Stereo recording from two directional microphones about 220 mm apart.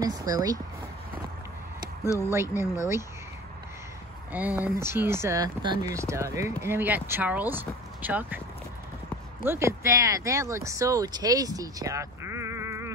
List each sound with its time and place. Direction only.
0.0 s speech: 15° right (ahead or behind)
2.2 s speech: 10° right (ahead or behind)
4.3 s speech: 5° right (ahead or behind)
9.4 s speech: 10° right (ahead or behind)